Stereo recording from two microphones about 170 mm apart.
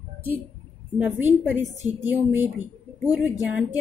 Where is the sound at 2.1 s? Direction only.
10° right (ahead or behind).